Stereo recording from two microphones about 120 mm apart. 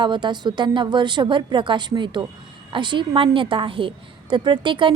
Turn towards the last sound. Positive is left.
turn(degrees=-45)  # may be behind; listen again after turning